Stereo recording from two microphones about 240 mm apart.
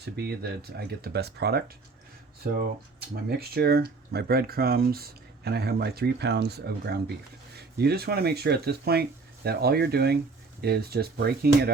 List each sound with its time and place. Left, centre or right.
0.0 s speech: right